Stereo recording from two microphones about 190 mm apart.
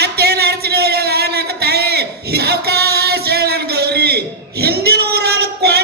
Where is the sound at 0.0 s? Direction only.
55° right (ahead or behind).